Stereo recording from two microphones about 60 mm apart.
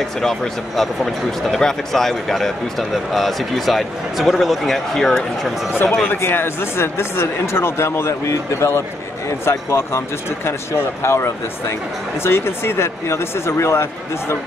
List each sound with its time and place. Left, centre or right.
0.2 s speech: centre
5.7 s speech: left